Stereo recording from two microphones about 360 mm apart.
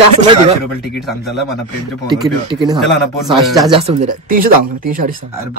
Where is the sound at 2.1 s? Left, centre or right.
Centre.